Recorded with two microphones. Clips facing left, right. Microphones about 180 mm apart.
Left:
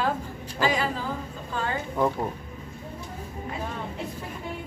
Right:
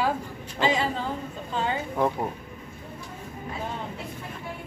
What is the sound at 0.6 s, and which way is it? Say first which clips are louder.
A woman's voice: right 1 dB; 25° right (ahead or behind).